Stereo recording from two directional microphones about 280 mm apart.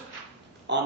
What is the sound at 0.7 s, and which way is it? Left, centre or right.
Speech, right.